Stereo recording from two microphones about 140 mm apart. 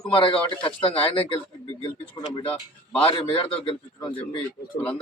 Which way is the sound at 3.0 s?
40° left (ahead or behind).